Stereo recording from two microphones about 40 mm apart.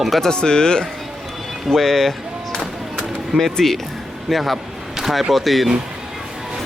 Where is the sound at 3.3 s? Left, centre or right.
Centre.